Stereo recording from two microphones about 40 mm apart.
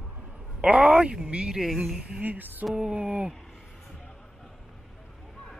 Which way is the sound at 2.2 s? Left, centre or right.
Right.